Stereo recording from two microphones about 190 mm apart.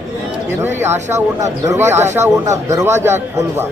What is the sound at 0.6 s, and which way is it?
A man's voice, 10° right (ahead or behind).